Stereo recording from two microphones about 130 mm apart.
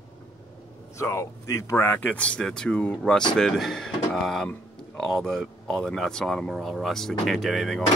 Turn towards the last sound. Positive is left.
turn(degrees=0)  # may be behind; listen again after turning